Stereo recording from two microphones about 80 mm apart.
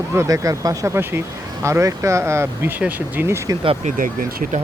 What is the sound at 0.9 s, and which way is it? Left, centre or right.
Speech, right.